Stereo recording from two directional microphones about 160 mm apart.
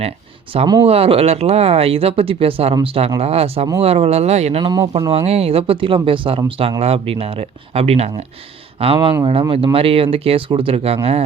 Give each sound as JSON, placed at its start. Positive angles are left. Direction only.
{"t": 0.5, "sound": "speech", "side_deg": -30}
{"t": 4.6, "sound": "speech", "side_deg": -25}
{"t": 5.1, "sound": "speech", "side_deg": -40}